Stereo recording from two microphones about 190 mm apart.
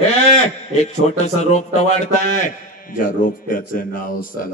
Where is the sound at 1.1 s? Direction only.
35° left (ahead or behind).